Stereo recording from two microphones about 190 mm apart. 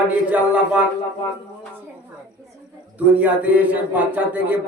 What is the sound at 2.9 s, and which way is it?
Speech, 10° right (ahead or behind).